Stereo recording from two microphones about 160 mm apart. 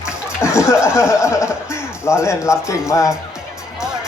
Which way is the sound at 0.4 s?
15° left (ahead or behind).